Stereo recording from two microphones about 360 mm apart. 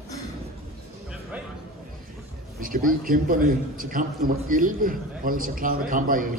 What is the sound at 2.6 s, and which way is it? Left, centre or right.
A man's voice, right.